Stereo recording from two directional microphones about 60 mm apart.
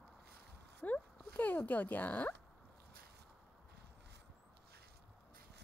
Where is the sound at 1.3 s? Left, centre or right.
Left.